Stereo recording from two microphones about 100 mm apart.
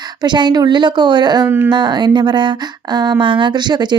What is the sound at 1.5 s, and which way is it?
Speech, 25° right (ahead or behind).